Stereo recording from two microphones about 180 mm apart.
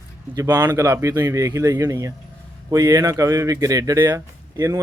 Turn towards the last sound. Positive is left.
turn(degrees=-20)  # may be behind; listen again after turning